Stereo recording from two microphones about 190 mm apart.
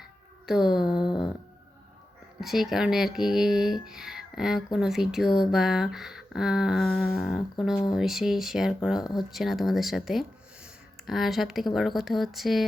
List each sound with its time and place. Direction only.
0.4 s speech: centre (ahead or behind)
0.9 s a sound: 25° left (ahead or behind)
2.4 s speech: centre (ahead or behind)